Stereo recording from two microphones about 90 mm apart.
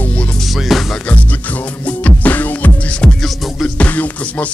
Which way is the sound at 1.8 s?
15° left (ahead or behind).